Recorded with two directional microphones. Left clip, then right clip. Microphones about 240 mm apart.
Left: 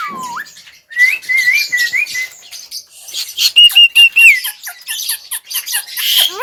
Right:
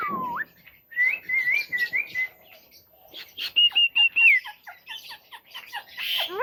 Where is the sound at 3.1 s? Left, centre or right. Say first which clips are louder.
Left 14 dB; centre.